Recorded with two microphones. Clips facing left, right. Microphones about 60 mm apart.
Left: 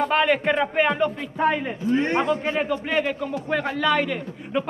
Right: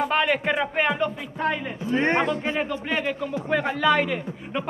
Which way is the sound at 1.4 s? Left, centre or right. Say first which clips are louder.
Left 4 dB; centre.